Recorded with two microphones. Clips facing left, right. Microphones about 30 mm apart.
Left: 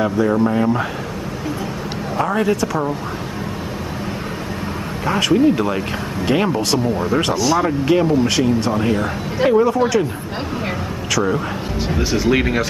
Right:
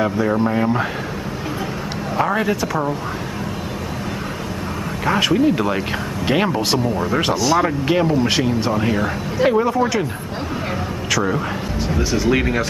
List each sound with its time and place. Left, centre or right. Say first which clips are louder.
0.0 s speech: left 2 dB; centre
2.1 s speech: left 1 dB; centre
5.0 s speech: left 1 dB; centre
8.7 s speech: left 1 dB; centre
11.1 s speech: left 1 dB; centre
11.9 s speech: left 1 dB; centre